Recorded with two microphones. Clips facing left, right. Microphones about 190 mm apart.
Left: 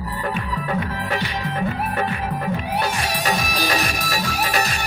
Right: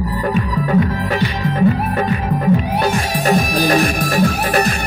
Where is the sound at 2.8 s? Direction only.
50° right (ahead or behind).